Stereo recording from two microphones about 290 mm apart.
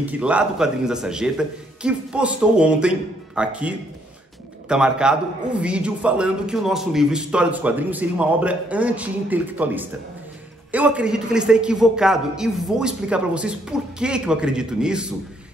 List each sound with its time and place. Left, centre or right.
0.0 s a man's voice: centre